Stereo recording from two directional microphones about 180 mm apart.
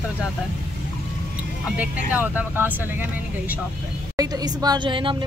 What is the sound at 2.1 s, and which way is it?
Speech, 10° right (ahead or behind).